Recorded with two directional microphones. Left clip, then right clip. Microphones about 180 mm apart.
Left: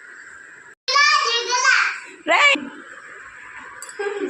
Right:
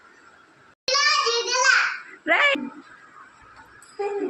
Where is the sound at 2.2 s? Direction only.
10° right (ahead or behind).